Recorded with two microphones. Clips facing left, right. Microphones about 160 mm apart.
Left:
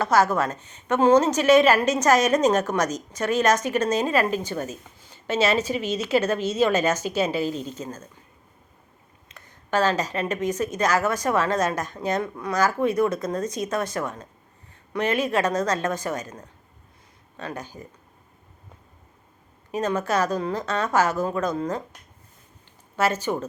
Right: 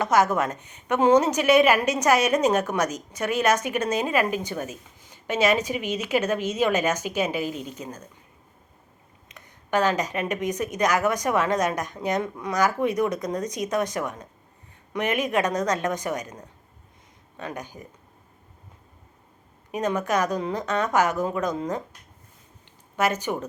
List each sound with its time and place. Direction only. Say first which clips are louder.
0.0 s a woman's voice: left 1 dB; 20° right (ahead or behind)
9.3 s a woman's voice: even; 15° right (ahead or behind)
19.7 s a woman's voice: left 1 dB; 15° right (ahead or behind)
23.0 s a woman's voice: left 1 dB; 15° right (ahead or behind)